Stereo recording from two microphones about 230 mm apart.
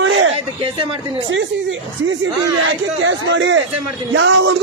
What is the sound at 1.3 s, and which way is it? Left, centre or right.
A man's voice, right.